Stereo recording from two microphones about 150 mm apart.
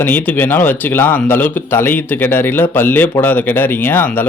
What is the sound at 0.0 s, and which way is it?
A man's voice, 15° left (ahead or behind).